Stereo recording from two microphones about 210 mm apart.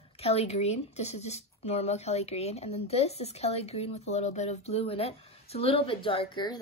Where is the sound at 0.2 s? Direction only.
30° left (ahead or behind).